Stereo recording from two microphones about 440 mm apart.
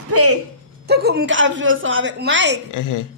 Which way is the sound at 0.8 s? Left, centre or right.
Right.